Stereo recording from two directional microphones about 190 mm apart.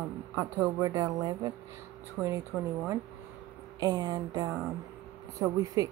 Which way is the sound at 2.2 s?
5° left (ahead or behind).